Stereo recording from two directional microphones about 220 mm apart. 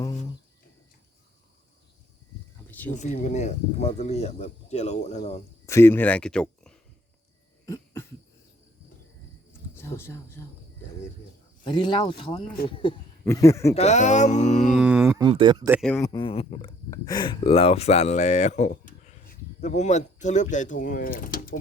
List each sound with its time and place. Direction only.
2.6 s a sound: 5° left (ahead or behind)
2.9 s speech: 30° left (ahead or behind)
5.6 s speech: 10° left (ahead or behind)
7.6 s cough: 15° left (ahead or behind)
9.5 s a sound: 10° left (ahead or behind)
11.6 s speech: 20° left (ahead or behind)
13.7 s speech: 30° left (ahead or behind)
14.7 s speech: 5° right (ahead or behind); by 15.7 s 20° right (ahead or behind)
16.0 s speech: 20° left (ahead or behind); by 21.5 s 40° left (ahead or behind)